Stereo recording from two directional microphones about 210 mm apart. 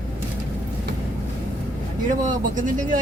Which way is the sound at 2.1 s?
40° right (ahead or behind).